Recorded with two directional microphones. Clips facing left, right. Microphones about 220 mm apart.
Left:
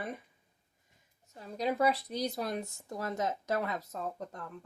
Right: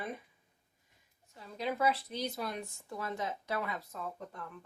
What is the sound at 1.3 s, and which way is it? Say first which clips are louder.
Speech: left 4 dB; 40° left (ahead or behind).